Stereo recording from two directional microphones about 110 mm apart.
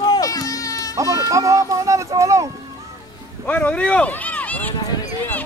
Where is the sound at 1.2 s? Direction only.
30° right (ahead or behind).